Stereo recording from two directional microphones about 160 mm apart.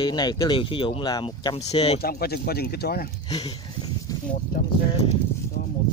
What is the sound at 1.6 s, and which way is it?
Speech, 40° left (ahead or behind).